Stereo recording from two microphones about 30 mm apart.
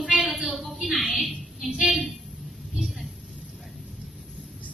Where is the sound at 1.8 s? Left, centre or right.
Centre.